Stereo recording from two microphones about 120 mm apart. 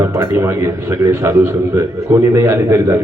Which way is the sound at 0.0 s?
20° right (ahead or behind).